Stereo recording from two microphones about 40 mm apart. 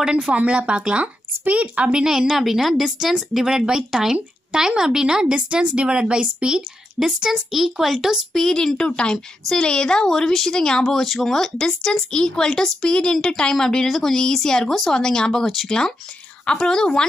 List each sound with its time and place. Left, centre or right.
0.3 s speech: right
1.9 s speech: centre
2.3 s speech: centre
7.3 s speech: centre
8.3 s speech: centre
8.7 s a woman's voice: left
11.0 s speech: centre
15.4 s speech: centre
16.4 s a woman's voice: centre